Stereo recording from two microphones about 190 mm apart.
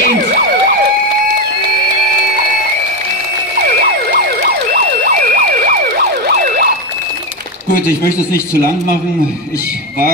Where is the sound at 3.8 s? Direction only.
55° right (ahead or behind).